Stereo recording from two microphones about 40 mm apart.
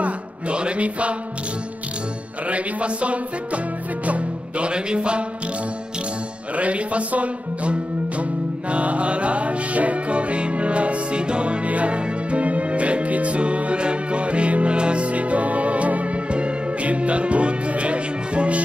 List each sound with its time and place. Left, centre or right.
0.0 s a sound: right
2.4 s music: right
6.5 s speech: right
8.2 s music: right